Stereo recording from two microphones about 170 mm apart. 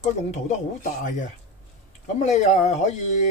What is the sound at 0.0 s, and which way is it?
Speech, 45° left (ahead or behind).